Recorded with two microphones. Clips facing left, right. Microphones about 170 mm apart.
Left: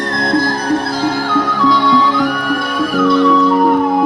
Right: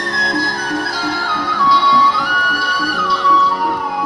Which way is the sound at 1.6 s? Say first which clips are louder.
Left 2 dB; 45° left (ahead or behind).